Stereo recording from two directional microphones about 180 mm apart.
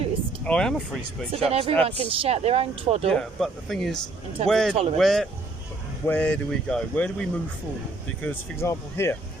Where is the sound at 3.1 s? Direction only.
Centre (ahead or behind).